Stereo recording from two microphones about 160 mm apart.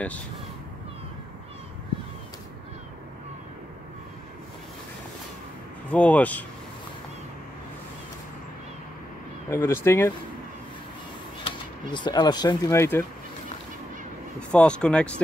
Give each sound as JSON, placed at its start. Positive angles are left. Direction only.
{"t": 5.9, "sound": "speech", "side_deg": 10}
{"t": 9.5, "sound": "speech", "side_deg": 15}
{"t": 11.9, "sound": "speech", "side_deg": 25}
{"t": 14.5, "sound": "speech", "side_deg": 5}